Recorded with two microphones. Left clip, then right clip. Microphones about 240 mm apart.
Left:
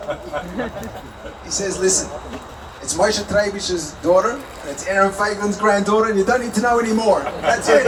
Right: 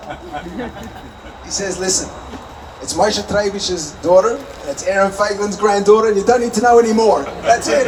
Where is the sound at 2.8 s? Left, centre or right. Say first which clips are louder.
Right 2 dB; right.